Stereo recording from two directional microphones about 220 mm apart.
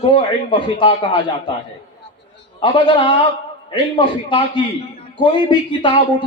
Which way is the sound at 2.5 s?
20° left (ahead or behind).